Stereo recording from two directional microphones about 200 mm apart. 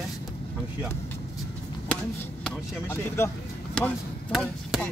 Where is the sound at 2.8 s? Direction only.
10° left (ahead or behind).